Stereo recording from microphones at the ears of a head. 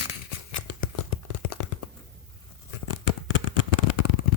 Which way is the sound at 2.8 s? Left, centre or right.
Left.